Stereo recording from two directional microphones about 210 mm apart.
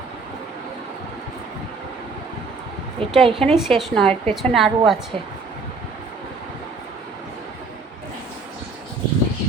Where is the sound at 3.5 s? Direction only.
Centre (ahead or behind).